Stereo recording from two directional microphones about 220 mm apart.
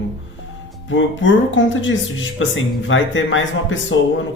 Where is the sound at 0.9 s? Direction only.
55° left (ahead or behind).